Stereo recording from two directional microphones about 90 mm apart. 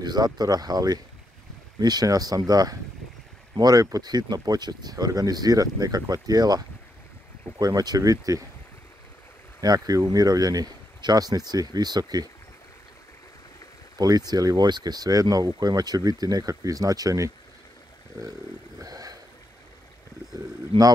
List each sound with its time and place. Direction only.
0.0 s speech: 50° right (ahead or behind)
9.6 s speech: 45° right (ahead or behind)
13.9 s speech: 45° right (ahead or behind)
18.8 s a sound: 40° right (ahead or behind)
20.7 s a man's voice: 90° right